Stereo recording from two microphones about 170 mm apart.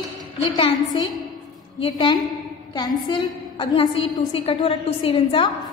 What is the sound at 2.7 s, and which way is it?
A woman's voice, 25° left (ahead or behind).